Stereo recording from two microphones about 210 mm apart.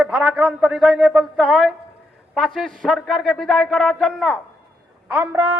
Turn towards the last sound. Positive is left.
turn(degrees=-10)  # may be behind; listen again after turning